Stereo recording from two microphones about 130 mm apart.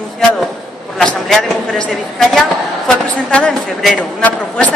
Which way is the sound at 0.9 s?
5° left (ahead or behind).